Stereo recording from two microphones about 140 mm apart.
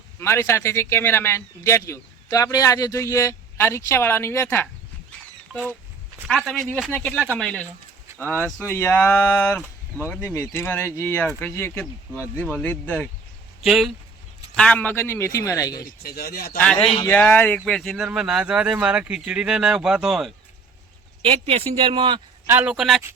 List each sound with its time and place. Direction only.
0.2 s speech: 20° left (ahead or behind)
5.5 s speech: 5° right (ahead or behind)
7.3 s speech: 10° left (ahead or behind)
13.7 s speech: centre (ahead or behind); by 15.9 s 25° left (ahead or behind)
16.0 s speech: 90° left
17.1 s speech: 10° left (ahead or behind)
21.2 s speech: 45° right (ahead or behind)
22.4 s speech: 10° right (ahead or behind)